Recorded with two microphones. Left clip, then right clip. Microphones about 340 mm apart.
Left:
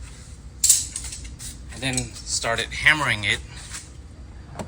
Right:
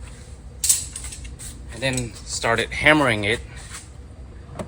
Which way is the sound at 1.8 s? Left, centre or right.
Right.